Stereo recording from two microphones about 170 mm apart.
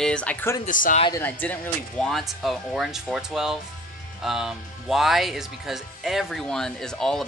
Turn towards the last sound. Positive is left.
turn(degrees=5)  # may be behind; listen again after turning